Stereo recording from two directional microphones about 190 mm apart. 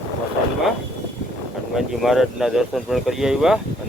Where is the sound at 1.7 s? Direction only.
Centre (ahead or behind).